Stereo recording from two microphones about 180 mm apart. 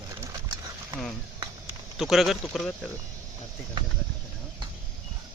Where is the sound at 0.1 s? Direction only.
15° right (ahead or behind).